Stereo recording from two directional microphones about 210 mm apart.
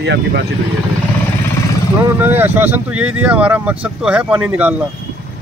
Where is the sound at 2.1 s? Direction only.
10° right (ahead or behind).